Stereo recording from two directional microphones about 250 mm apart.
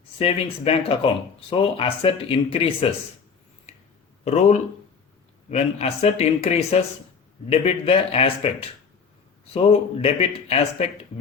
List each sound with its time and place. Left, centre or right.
0.2 s speech: left
4.2 s speech: left
9.5 s speech: left